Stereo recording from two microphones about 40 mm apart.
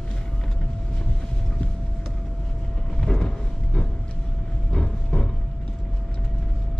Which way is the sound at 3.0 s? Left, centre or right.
Centre.